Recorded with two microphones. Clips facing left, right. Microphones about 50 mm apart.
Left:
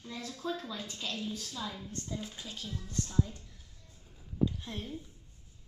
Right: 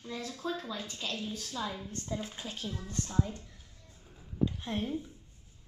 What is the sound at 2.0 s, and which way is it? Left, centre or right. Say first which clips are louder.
Speech: right 3 dB; right.